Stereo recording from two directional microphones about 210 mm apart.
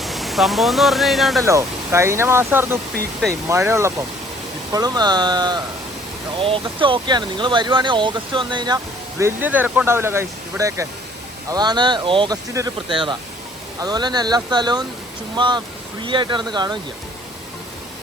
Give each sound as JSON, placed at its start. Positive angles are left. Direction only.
{"t": 0.0, "sound": "speech", "side_deg": 0}
{"t": 1.5, "sound": "speech", "side_deg": -15}